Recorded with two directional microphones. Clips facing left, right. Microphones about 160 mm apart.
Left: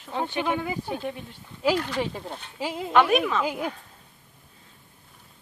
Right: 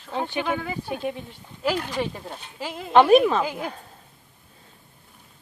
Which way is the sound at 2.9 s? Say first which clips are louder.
Right 6 dB; 30° right (ahead or behind).